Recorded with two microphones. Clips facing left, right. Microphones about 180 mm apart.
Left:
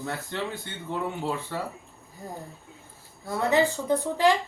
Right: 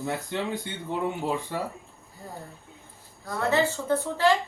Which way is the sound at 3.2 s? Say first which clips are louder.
Left 2 dB; 15° left (ahead or behind).